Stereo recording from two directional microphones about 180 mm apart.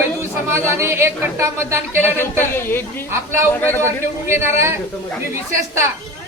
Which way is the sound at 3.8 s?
15° right (ahead or behind).